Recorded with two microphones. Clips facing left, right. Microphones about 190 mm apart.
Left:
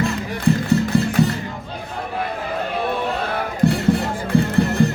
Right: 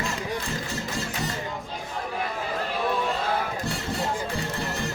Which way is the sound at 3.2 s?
60° left (ahead or behind).